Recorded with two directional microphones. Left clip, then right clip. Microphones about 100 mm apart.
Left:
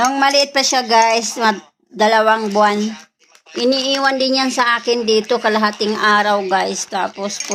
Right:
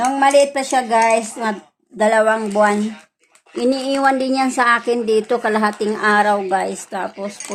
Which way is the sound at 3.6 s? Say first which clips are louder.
Left 1 dB; 35° right (ahead or behind).